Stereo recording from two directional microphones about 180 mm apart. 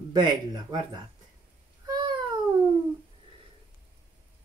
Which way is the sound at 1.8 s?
20° right (ahead or behind).